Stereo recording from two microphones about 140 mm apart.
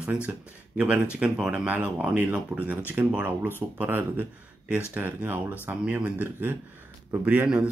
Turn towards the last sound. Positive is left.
turn(degrees=-15)  # may be behind; listen again after turning